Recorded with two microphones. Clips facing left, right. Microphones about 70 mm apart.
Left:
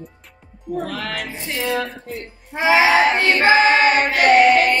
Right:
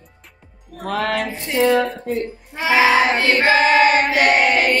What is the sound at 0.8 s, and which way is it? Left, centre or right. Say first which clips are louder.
Music: right 6 dB; right.